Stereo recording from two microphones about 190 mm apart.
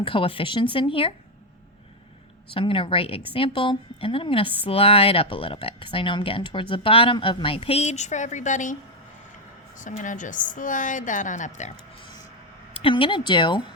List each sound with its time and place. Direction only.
0.0 s a woman's voice: 30° left (ahead or behind)
2.5 s a woman's voice: 25° left (ahead or behind)
9.7 s a woman's voice: 40° left (ahead or behind)
12.7 s a woman's voice: 25° left (ahead or behind)